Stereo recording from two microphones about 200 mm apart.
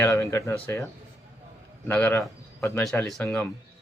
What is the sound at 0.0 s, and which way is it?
Speech, 15° left (ahead or behind).